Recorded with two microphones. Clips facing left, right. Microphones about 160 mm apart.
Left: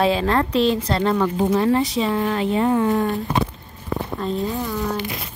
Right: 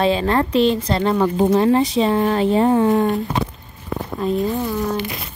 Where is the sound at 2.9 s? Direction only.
20° right (ahead or behind).